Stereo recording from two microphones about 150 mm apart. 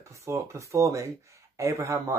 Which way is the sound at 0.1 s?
20° right (ahead or behind).